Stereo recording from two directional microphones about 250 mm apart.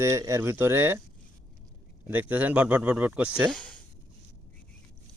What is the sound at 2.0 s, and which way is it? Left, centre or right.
Speech, centre.